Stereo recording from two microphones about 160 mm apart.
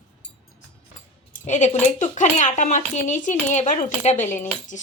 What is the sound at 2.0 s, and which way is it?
Speech, 50° left (ahead or behind).